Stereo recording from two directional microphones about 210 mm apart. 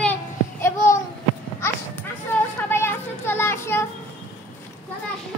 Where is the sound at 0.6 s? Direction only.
15° left (ahead or behind).